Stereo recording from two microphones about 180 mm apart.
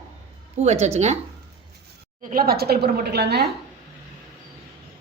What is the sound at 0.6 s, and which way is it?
Speech, 40° right (ahead or behind).